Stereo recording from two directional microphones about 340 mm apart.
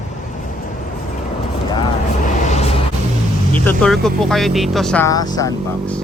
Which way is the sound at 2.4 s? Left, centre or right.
Centre.